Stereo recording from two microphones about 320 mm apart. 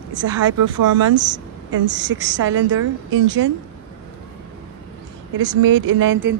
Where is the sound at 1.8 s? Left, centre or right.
Right.